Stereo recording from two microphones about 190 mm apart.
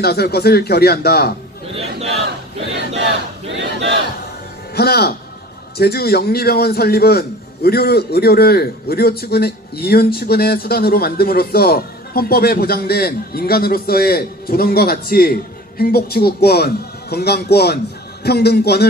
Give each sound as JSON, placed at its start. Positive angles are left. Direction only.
{"t": 0.0, "sound": "a man's voice", "side_deg": 55}
{"t": 3.5, "sound": "battle cry", "side_deg": -70}
{"t": 4.7, "sound": "a man's voice", "side_deg": 55}